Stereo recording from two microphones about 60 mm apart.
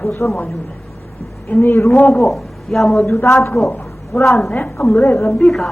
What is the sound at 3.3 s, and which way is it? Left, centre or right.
Speech, left.